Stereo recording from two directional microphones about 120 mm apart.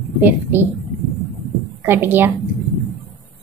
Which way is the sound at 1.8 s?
15° right (ahead or behind).